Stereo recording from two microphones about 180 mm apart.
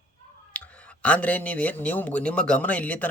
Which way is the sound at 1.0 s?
10° left (ahead or behind).